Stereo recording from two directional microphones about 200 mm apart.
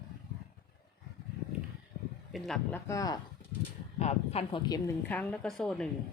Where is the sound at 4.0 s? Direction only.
30° left (ahead or behind).